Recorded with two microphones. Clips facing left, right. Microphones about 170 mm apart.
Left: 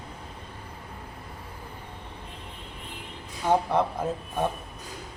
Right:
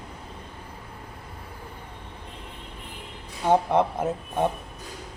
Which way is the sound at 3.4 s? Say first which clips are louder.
Right 3 dB; 20° right (ahead or behind).